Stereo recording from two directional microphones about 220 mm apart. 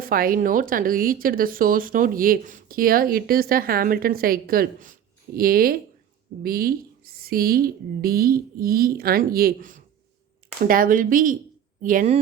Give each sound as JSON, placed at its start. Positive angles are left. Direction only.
{"t": 0.0, "sound": "speech", "side_deg": -40}